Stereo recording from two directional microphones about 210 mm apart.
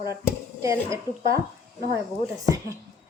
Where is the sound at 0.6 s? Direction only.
15° right (ahead or behind).